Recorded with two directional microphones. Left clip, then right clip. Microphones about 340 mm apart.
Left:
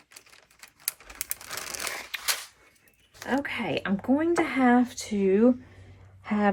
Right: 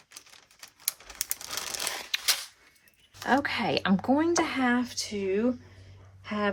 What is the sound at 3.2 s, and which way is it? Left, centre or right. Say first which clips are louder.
A woman's voice: right 3 dB; centre.